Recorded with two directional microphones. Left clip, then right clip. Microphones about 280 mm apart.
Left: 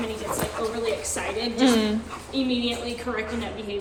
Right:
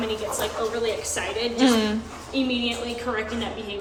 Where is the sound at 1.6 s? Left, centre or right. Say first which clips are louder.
Even; centre.